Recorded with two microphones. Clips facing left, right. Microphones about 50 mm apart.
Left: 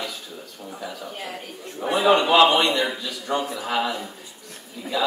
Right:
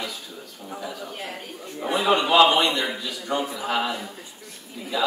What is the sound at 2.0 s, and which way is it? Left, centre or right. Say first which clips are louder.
A man's voice: left 1 dB; centre.